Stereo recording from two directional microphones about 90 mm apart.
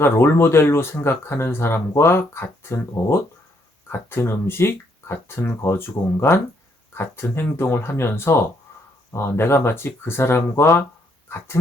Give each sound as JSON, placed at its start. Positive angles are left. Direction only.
{"t": 0.0, "sound": "speech", "side_deg": 25}